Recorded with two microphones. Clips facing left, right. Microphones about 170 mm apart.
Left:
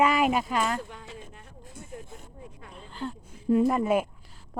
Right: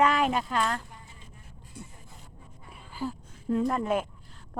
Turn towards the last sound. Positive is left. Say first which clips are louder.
# left 4 dB
turn(degrees=10)  # may be behind; listen again after turning